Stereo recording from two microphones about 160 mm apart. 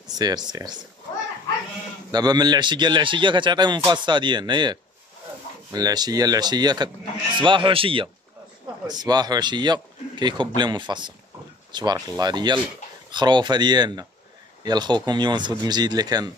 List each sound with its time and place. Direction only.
0.2 s a man's voice: 25° right (ahead or behind)
2.0 s a man's voice: 25° right (ahead or behind)